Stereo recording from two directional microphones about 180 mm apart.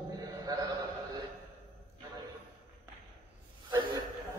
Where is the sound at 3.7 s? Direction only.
25° right (ahead or behind).